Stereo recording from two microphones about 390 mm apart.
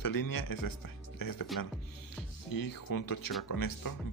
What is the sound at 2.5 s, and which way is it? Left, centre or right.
Speech, left.